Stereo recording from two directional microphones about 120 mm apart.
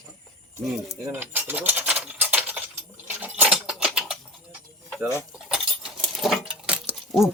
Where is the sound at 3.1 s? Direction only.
15° right (ahead or behind).